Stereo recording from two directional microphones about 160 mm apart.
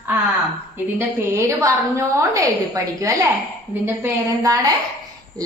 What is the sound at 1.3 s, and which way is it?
A woman's voice, 20° right (ahead or behind).